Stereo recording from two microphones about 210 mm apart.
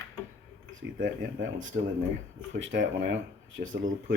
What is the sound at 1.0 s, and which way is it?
Speech, 65° right (ahead or behind).